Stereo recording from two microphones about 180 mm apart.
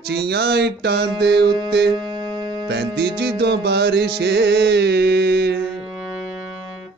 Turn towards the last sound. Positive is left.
turn(degrees=-65)  # may be behind; listen again after turning